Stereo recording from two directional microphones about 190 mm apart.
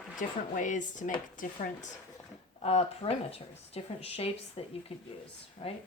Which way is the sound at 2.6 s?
30° left (ahead or behind).